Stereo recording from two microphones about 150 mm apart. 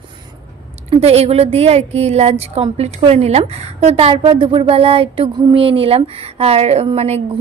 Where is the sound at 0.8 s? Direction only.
40° right (ahead or behind).